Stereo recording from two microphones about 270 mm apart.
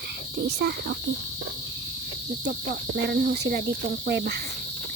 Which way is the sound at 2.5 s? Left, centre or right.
Right.